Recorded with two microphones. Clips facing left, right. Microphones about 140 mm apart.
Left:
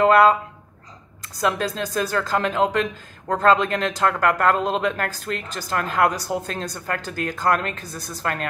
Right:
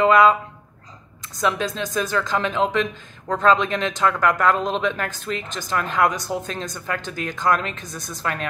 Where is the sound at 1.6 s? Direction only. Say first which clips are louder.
Even; 40° left (ahead or behind).